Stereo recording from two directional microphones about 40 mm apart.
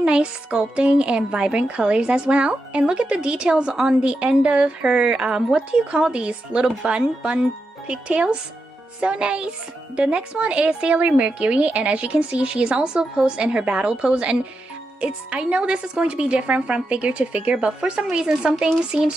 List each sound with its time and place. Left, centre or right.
0.0 s a woman's voice: right